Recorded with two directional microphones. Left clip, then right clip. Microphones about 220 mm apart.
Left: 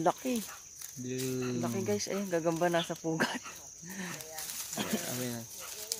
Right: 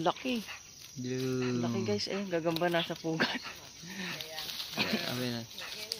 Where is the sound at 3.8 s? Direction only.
25° left (ahead or behind).